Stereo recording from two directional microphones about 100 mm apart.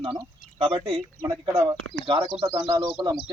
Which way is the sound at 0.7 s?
60° right (ahead or behind).